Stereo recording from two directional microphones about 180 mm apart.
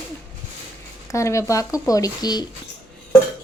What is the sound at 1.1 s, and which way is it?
Speech, 15° left (ahead or behind).